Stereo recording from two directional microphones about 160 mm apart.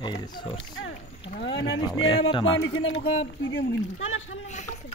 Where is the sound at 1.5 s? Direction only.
30° left (ahead or behind).